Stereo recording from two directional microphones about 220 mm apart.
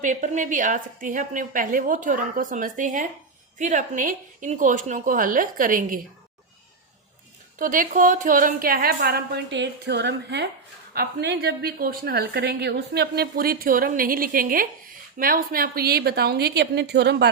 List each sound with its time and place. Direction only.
0.0 s a woman's voice: 35° right (ahead or behind)
7.6 s a woman's voice: 35° right (ahead or behind)